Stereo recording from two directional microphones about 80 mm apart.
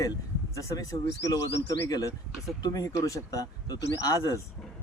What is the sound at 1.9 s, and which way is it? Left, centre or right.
Speech, left.